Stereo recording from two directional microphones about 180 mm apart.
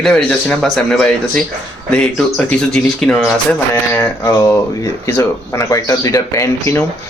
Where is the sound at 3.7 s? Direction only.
10° left (ahead or behind).